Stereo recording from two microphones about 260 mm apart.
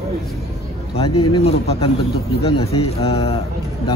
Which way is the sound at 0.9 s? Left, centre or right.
Left.